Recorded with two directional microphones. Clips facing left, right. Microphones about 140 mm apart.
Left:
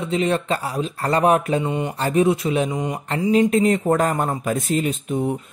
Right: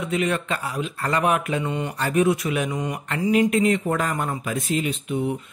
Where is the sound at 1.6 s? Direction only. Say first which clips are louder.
Left 3 dB; 20° left (ahead or behind).